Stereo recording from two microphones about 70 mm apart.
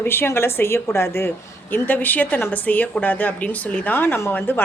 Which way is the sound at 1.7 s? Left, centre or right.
Left.